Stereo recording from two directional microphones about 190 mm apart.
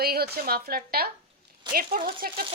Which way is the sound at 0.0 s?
55° right (ahead or behind).